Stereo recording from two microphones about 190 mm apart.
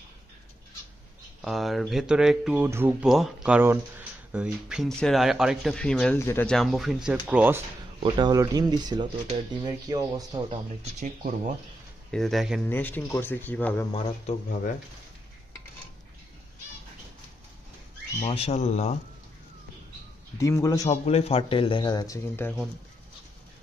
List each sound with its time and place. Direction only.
1.4 s speech: centre (ahead or behind)
8.0 s speech: 20° right (ahead or behind)
11.0 s speech: 40° right (ahead or behind)
12.1 s speech: centre (ahead or behind)
12.6 s speech: 10° left (ahead or behind)
13.9 s speech: 40° left (ahead or behind)
18.2 s speech: 35° left (ahead or behind)
20.3 s speech: 15° left (ahead or behind)
20.9 s speech: 35° left (ahead or behind); by 22.5 s 15° left (ahead or behind)